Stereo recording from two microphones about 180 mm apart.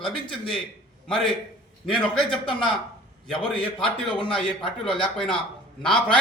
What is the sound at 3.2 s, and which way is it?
A man's voice, 5° left (ahead or behind).